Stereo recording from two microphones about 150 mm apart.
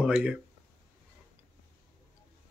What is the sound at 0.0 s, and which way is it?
Speech, 5° right (ahead or behind).